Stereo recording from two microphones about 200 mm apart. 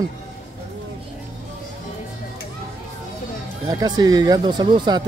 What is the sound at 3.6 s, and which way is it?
Speech, 20° right (ahead or behind).